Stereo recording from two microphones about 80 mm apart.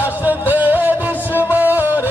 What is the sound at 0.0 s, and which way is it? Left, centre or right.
Music, right.